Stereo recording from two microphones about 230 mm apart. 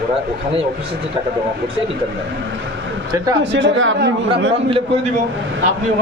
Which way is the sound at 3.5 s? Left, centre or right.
Right.